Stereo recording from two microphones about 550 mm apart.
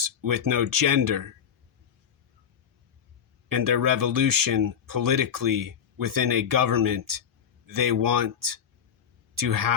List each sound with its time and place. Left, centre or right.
0.0 s speech: right
3.5 s speech: right